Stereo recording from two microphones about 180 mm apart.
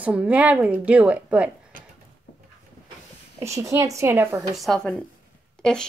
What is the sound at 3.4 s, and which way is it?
Speech, 15° right (ahead or behind).